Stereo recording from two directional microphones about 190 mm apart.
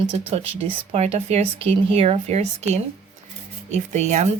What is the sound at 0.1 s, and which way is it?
Speech, 35° right (ahead or behind).